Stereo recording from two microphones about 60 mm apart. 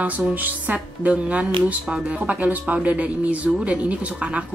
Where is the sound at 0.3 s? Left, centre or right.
Right.